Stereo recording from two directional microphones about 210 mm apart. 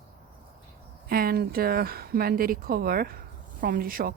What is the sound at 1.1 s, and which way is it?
Speech, 45° right (ahead or behind).